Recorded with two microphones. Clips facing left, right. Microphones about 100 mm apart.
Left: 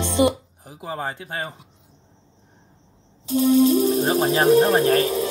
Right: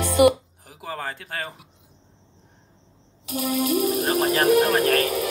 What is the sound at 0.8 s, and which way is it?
Speech, 20° left (ahead or behind).